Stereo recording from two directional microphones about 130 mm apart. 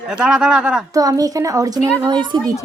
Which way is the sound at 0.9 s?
30° right (ahead or behind).